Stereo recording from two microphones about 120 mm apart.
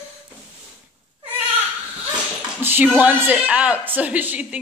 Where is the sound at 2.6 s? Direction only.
15° right (ahead or behind).